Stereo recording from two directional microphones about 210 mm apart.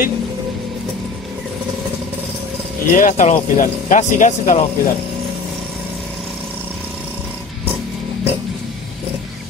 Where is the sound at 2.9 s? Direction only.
40° left (ahead or behind).